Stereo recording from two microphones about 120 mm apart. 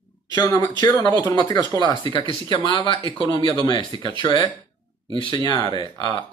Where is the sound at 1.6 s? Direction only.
40° right (ahead or behind).